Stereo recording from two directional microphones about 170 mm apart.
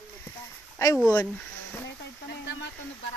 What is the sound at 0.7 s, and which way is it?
Speech, 15° left (ahead or behind).